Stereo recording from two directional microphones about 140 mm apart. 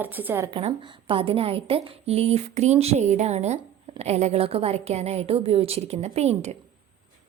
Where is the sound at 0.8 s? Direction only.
40° right (ahead or behind).